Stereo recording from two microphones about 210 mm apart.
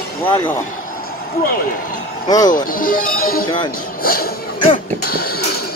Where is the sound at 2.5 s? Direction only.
40° left (ahead or behind).